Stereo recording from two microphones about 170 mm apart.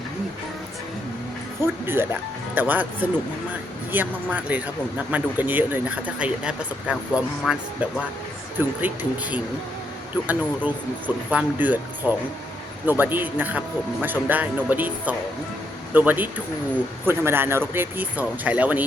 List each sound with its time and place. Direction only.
1.6 s speech: 15° right (ahead or behind)
10.2 s speech: 10° right (ahead or behind)